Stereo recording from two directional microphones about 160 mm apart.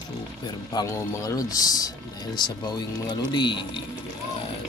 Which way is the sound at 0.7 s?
20° left (ahead or behind).